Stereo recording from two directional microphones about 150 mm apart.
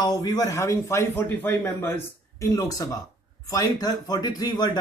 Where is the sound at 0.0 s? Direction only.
25° left (ahead or behind).